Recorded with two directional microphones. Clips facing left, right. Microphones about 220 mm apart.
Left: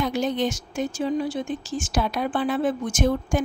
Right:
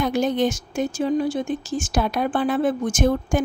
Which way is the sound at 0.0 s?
50° right (ahead or behind).